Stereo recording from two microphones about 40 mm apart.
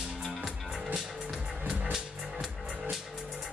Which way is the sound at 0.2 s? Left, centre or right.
Centre.